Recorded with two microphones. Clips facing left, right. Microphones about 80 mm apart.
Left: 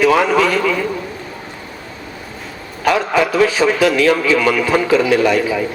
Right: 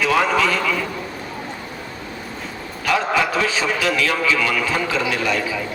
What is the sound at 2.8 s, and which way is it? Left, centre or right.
A man's voice, left.